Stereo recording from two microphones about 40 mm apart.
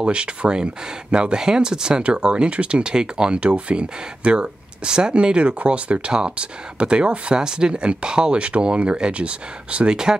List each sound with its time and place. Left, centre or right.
0.0 s speech: right